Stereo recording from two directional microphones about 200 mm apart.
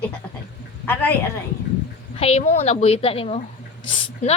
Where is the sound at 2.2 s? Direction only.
35° left (ahead or behind).